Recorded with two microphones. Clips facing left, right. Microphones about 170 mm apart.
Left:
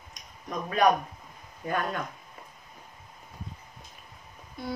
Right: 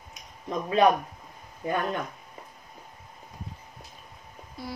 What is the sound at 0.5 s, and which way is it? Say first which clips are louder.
Speech: right 2 dB; 25° right (ahead or behind).